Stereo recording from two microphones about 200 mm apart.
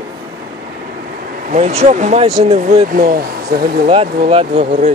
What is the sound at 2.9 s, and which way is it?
Speech, 45° right (ahead or behind).